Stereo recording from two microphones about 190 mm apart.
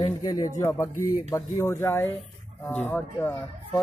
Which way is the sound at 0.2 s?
20° left (ahead or behind).